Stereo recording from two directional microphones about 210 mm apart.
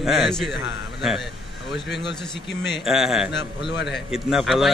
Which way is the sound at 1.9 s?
55° left (ahead or behind).